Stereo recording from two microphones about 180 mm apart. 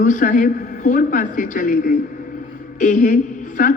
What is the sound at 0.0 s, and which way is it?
A woman's voice, 45° left (ahead or behind).